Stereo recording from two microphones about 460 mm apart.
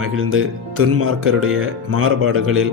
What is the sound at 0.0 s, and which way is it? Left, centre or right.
Speech, right.